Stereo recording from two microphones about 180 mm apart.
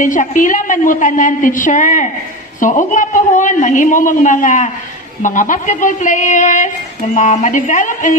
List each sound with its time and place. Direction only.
0.0 s a woman's voice: 45° left (ahead or behind)